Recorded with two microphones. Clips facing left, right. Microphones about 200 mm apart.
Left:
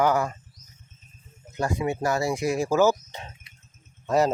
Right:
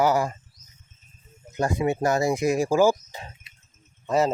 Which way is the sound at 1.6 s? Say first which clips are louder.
Right 3 dB; 20° right (ahead or behind).